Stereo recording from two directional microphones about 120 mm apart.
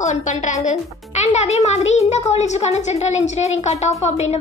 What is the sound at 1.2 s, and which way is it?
A child's voice, 70° left (ahead or behind).